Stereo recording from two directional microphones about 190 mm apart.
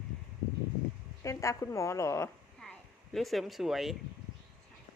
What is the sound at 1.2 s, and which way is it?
A woman's voice, 15° left (ahead or behind).